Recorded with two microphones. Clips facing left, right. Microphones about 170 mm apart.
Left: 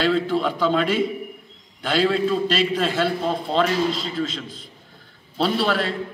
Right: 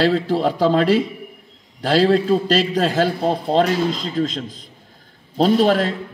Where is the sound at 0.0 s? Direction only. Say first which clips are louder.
Right 3 dB; 40° right (ahead or behind).